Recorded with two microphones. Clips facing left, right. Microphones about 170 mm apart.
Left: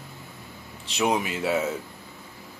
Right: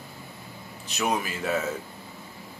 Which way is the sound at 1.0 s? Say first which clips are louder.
Left 3 dB; 20° left (ahead or behind).